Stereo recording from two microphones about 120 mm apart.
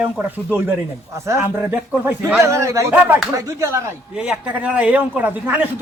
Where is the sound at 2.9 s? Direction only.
15° right (ahead or behind).